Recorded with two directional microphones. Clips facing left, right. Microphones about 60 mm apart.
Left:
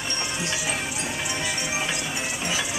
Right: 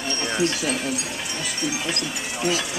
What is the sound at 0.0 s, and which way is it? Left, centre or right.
Music, centre.